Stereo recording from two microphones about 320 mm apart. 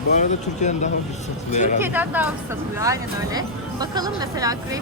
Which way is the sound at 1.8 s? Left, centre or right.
Centre.